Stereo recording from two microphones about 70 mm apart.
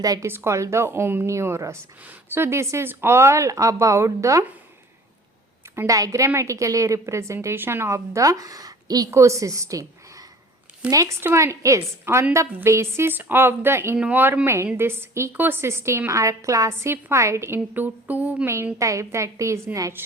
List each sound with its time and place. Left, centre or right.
0.0 s speech: right
0.3 s a woman's voice: right
5.7 s speech: right
7.4 s speech: right
9.0 s a woman's voice: right
10.8 s speech: centre
11.3 s speech: right
12.1 s a woman's voice: right
14.0 s a sound: right
14.4 s a woman's voice: right
17.7 s a sound: right
18.4 s speech: right
20.0 s a woman's voice: right